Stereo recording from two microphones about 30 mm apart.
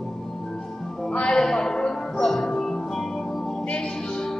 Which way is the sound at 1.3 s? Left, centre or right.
Left.